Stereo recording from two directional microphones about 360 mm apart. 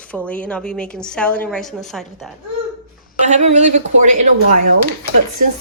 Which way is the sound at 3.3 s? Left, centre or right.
Centre.